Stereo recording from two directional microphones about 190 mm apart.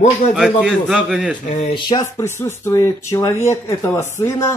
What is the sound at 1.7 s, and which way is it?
A man's voice, 20° left (ahead or behind).